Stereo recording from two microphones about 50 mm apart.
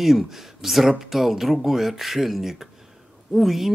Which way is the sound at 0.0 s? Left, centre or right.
Centre.